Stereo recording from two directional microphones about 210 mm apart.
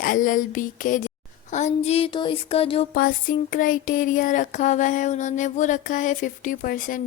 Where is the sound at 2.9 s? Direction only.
40° left (ahead or behind).